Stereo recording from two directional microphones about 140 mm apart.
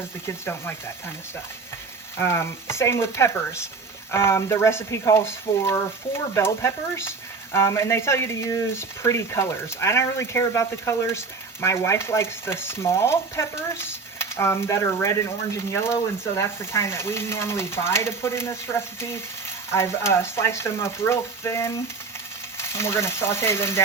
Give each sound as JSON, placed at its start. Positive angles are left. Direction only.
{"t": 0.3, "sound": "speech", "side_deg": 15}
{"t": 2.1, "sound": "speech", "side_deg": 20}